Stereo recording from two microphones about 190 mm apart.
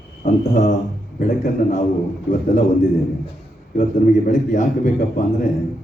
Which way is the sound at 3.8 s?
45° left (ahead or behind).